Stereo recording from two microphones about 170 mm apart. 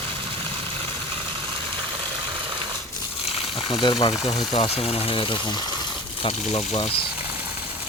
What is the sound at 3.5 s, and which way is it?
Speech, 25° left (ahead or behind).